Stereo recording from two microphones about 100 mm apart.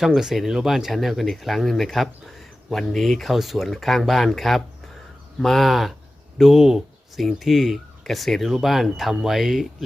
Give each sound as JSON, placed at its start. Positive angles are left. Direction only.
{"t": 0.0, "sound": "speech", "side_deg": -5}